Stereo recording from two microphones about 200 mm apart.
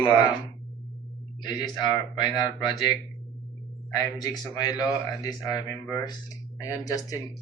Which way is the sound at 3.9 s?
20° left (ahead or behind).